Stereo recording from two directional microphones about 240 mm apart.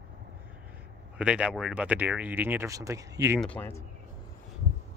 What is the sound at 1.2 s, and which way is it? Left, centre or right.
Speech, centre.